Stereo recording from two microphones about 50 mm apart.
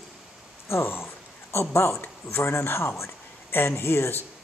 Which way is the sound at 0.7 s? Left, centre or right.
Left.